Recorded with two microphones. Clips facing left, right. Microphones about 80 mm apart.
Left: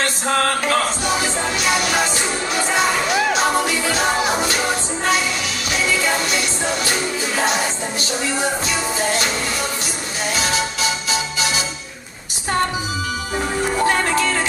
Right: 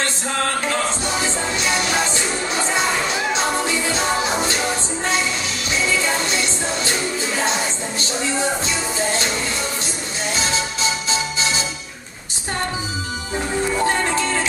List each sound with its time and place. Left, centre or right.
0.3 s a sound: left
1.0 s music: right
5.7 s music: right
10.3 s music: right
13.8 s music: left